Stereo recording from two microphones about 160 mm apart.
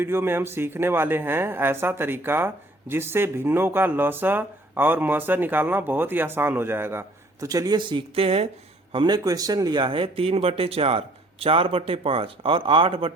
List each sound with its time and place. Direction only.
0.0 s speech: 15° right (ahead or behind); by 13.1 s 35° right (ahead or behind)